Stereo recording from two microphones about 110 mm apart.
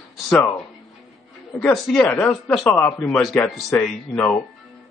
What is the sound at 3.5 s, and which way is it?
Speech, 5° left (ahead or behind).